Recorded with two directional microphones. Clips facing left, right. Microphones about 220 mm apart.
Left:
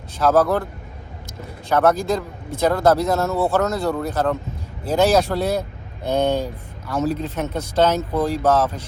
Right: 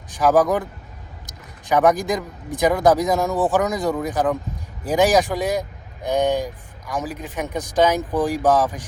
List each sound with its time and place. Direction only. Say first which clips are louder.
0.2 s speech: even; 15° right (ahead or behind)